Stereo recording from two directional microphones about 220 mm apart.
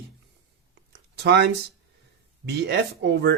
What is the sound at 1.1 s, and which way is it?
Speech, 50° right (ahead or behind).